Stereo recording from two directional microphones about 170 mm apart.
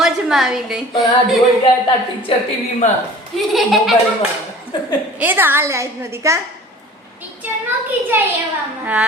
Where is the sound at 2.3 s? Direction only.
30° left (ahead or behind).